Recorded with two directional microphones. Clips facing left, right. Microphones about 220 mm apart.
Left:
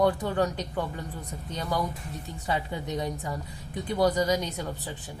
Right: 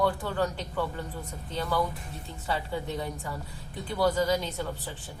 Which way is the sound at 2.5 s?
15° left (ahead or behind).